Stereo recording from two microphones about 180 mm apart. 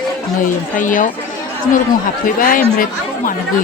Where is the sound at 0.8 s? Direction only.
45° left (ahead or behind).